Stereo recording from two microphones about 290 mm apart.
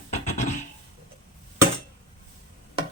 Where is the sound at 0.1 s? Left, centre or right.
Left.